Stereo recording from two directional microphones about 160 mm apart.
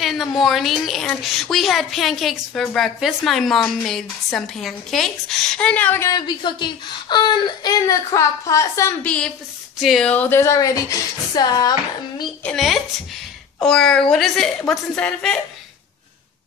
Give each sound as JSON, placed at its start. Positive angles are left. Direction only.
{"t": 0.0, "sound": "a woman's voice", "side_deg": 0}
{"t": 12.4, "sound": "a woman's voice", "side_deg": 0}